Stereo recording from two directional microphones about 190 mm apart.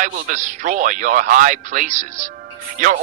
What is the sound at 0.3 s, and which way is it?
A man's voice, 40° right (ahead or behind).